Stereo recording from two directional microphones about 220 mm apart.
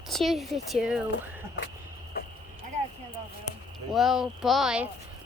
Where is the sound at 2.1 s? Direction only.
45° left (ahead or behind).